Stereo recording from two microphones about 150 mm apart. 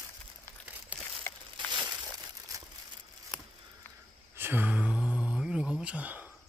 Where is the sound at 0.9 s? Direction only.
10° right (ahead or behind).